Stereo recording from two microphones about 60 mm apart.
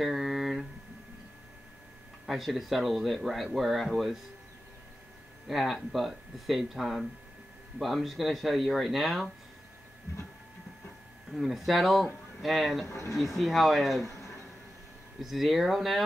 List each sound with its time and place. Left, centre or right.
0.0 s a sound: centre
2.2 s speech: centre
5.5 s speech: centre
11.3 s speech: centre
12.8 s speech: left
13.4 s speech: centre
15.1 s speech: centre